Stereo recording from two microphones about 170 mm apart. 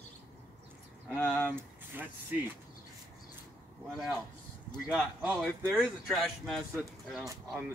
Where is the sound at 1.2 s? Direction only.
10° left (ahead or behind).